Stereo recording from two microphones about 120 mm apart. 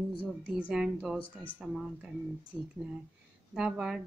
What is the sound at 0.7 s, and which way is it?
A woman's voice, 5° right (ahead or behind).